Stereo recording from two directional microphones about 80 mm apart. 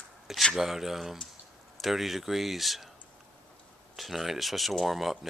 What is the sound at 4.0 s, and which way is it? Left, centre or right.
Speech, centre.